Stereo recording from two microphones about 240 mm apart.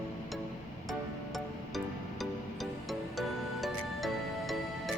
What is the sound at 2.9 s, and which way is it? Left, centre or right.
Music, centre.